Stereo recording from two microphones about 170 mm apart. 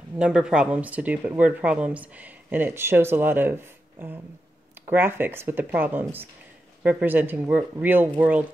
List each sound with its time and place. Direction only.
0.2 s speech: 5° right (ahead or behind)
4.8 s speech: 10° right (ahead or behind)